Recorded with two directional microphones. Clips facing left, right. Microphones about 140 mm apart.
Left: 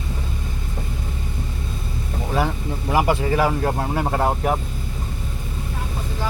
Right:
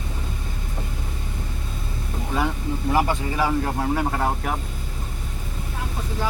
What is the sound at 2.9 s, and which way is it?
Speech, 10° left (ahead or behind).